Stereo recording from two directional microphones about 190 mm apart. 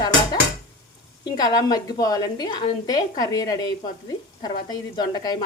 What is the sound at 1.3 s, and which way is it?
A woman's voice, 20° left (ahead or behind).